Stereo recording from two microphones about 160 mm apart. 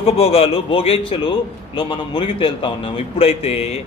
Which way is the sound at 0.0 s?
40° left (ahead or behind).